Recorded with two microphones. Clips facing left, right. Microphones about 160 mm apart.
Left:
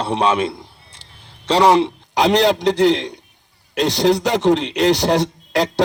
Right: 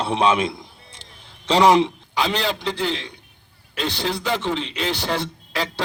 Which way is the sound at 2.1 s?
75° left (ahead or behind).